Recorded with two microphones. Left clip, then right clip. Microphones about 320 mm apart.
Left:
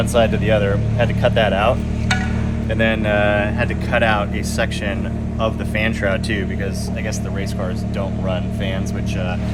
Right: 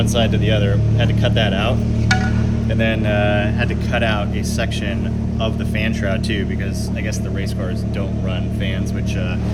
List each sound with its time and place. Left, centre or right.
0.1 s speech: centre
2.7 s speech: centre
5.4 s speech: centre